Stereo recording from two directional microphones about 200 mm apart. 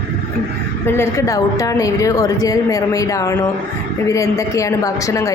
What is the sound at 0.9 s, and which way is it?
A woman's voice, 15° left (ahead or behind).